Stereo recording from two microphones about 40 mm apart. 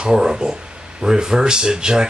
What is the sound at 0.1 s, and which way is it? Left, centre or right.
Speech, centre.